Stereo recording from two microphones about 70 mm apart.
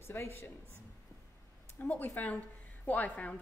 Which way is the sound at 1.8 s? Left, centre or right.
Left.